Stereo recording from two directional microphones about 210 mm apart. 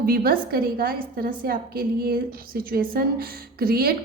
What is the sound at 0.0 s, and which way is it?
A woman's voice, 45° right (ahead or behind).